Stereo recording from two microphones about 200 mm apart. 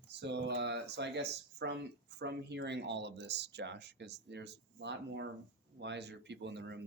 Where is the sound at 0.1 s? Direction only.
60° right (ahead or behind).